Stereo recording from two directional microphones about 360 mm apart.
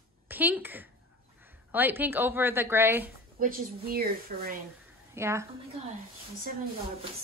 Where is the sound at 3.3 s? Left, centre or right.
Right.